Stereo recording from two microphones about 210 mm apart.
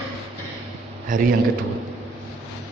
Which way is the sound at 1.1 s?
40° right (ahead or behind).